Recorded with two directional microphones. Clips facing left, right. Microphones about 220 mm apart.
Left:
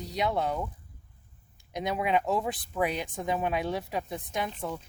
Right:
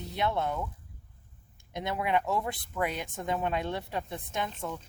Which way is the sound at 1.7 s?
20° left (ahead or behind).